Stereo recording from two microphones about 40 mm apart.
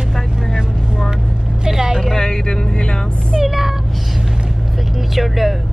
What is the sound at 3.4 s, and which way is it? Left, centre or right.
Meow, centre.